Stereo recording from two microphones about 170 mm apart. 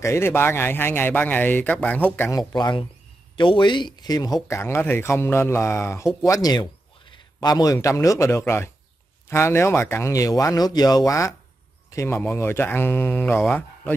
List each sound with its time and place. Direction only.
0.0 s speech: 15° left (ahead or behind)
2.5 s speech: 25° left (ahead or behind)